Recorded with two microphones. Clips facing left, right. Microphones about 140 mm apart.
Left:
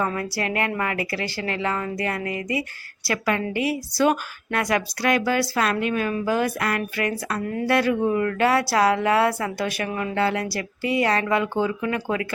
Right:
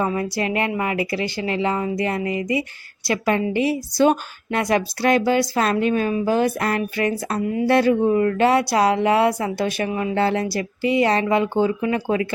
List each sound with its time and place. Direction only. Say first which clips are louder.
0.0 s speech: right 3 dB; 20° right (ahead or behind)
7.4 s speech: right 6 dB; 15° right (ahead or behind)
7.7 s speech: right 4 dB; 25° right (ahead or behind)